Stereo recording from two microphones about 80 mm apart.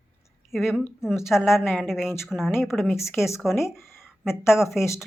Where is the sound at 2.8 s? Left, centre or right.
Left.